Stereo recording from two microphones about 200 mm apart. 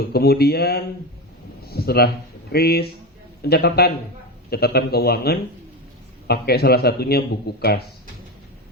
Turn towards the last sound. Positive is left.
turn(degrees=50)  # may be behind; listen again after turning